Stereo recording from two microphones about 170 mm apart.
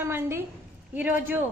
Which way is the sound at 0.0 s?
15° right (ahead or behind).